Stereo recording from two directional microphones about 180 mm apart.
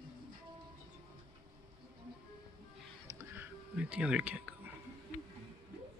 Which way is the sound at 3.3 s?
5° right (ahead or behind).